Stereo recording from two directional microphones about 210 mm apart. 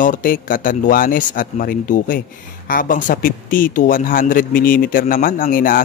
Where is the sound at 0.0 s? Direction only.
40° left (ahead or behind).